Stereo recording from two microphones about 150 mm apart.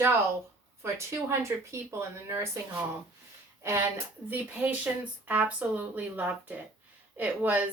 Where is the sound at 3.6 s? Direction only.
15° right (ahead or behind).